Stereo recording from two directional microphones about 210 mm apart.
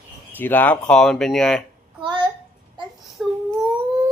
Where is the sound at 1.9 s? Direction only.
20° right (ahead or behind).